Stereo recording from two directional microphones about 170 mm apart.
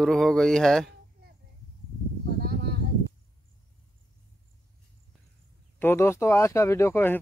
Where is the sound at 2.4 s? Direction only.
65° right (ahead or behind).